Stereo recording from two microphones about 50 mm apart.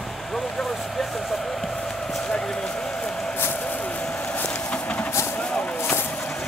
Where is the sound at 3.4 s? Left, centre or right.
Left.